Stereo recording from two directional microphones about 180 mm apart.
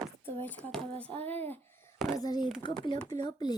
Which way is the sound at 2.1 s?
20° left (ahead or behind).